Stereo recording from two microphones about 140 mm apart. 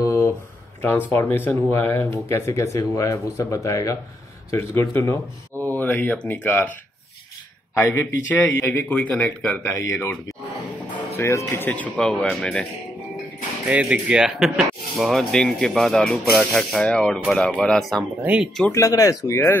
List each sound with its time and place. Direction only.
0.0 s a sound: 20° left (ahead or behind)
0.8 s speech: 15° left (ahead or behind)
7.7 s speech: 20° left (ahead or behind)
13.7 s speech: 10° right (ahead or behind)
18.2 s speech: 10° right (ahead or behind)
18.7 s speech: 25° left (ahead or behind)